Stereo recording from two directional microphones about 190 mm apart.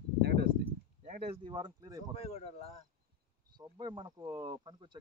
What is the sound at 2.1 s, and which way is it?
Speech, 35° left (ahead or behind).